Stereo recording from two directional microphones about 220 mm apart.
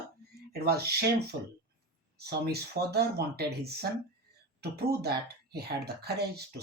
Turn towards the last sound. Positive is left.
turn(degrees=-45)  # may be behind; listen again after turning